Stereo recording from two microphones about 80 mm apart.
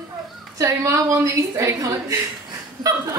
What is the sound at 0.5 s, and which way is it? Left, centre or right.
A woman's voice, right.